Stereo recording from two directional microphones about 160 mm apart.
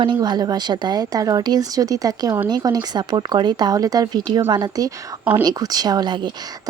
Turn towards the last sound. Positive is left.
turn(degrees=-30)  # may be behind; listen again after turning